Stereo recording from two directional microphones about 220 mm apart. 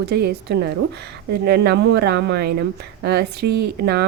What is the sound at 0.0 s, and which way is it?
Speech, 45° right (ahead or behind).